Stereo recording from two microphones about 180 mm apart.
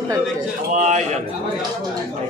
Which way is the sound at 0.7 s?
40° right (ahead or behind).